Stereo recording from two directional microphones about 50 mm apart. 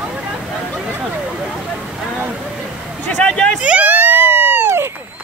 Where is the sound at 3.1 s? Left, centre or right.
Left.